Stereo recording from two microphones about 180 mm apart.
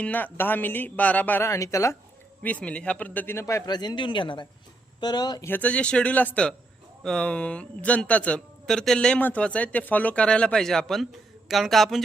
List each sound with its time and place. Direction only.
0.0 s speech: 10° left (ahead or behind)
5.5 s speech: 10° left (ahead or behind)